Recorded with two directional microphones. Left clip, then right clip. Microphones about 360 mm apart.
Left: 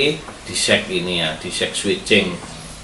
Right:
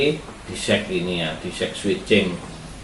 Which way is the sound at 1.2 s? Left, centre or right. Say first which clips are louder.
Left 4 dB; centre.